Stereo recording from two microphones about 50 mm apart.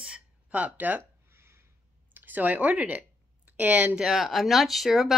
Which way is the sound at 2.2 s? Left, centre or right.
Right.